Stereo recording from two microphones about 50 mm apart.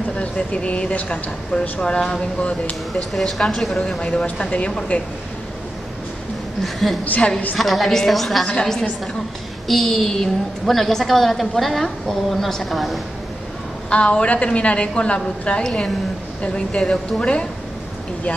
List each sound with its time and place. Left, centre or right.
0.2 s speech: left
3.1 s a woman's voice: centre
4.0 s speech: centre
6.6 s a woman's voice: centre
7.1 s speech: left
7.5 s a woman's voice: centre
13.8 s speech: left